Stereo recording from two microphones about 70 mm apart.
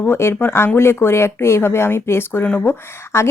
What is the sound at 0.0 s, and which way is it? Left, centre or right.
A woman's voice, left.